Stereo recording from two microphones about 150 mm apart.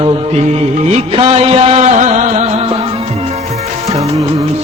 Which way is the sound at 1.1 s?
40° right (ahead or behind).